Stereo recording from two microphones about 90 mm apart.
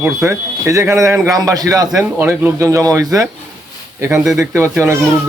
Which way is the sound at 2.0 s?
30° right (ahead or behind).